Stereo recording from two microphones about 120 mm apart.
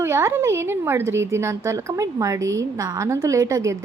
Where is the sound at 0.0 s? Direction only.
20° right (ahead or behind).